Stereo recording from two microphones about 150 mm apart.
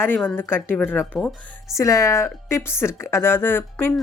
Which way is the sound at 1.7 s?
20° left (ahead or behind).